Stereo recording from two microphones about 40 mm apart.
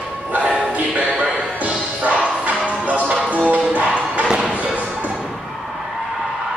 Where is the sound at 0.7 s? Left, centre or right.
Right.